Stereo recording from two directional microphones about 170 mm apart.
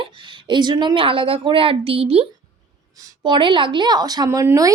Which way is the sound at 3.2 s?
25° right (ahead or behind).